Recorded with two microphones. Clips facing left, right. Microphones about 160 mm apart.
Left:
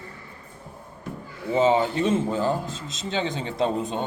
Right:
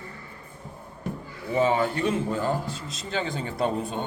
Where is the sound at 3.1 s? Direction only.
25° left (ahead or behind).